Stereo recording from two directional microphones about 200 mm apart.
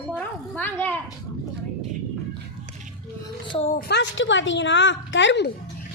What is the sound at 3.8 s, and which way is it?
A woman's voice, 55° left (ahead or behind).